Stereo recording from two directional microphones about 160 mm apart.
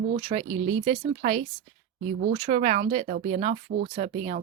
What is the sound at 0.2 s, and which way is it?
Speech, 30° right (ahead or behind).